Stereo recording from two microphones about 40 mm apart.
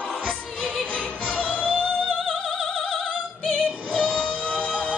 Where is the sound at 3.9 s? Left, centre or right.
Right.